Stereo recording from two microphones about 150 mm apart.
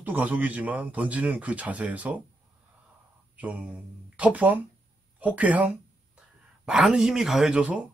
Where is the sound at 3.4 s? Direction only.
10° right (ahead or behind).